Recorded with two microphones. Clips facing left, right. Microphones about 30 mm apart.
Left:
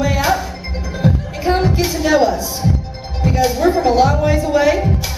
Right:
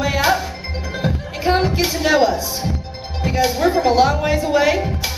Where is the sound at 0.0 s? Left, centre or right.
Centre.